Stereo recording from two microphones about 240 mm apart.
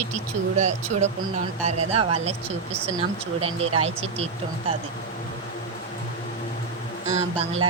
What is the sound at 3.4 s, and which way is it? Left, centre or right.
Speech, right.